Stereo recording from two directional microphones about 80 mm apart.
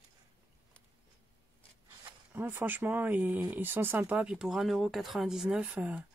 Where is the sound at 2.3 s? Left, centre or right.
Right.